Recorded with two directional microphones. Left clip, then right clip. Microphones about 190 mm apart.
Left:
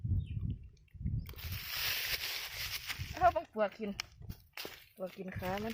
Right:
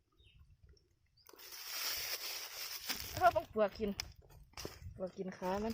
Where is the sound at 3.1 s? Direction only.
10° right (ahead or behind).